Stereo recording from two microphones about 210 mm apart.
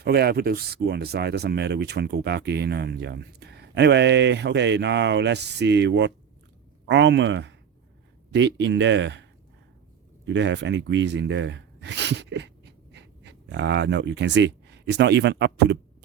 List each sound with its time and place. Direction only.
0.0 s speech: 50° right (ahead or behind)
10.2 s speech: 60° right (ahead or behind)